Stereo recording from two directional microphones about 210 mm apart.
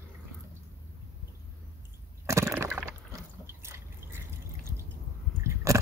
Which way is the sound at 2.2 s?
10° right (ahead or behind).